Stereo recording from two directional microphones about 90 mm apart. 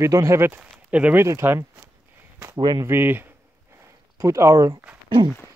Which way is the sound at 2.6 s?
50° right (ahead or behind).